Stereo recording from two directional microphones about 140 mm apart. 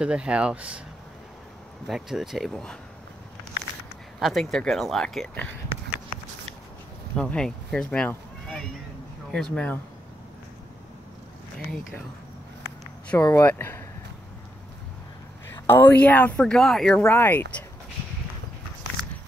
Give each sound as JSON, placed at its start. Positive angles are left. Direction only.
{"t": 0.0, "sound": "speech", "side_deg": -5}
{"t": 1.9, "sound": "speech", "side_deg": -5}
{"t": 4.2, "sound": "speech", "side_deg": 0}
{"t": 7.2, "sound": "speech", "side_deg": 5}
{"t": 13.2, "sound": "speech", "side_deg": 20}
{"t": 15.4, "sound": "speech", "side_deg": 15}
{"t": 17.1, "sound": "speech", "side_deg": 15}